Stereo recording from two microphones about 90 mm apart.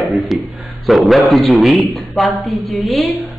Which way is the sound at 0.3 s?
Centre (ahead or behind).